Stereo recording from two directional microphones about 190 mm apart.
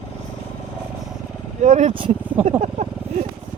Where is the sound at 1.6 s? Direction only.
40° right (ahead or behind).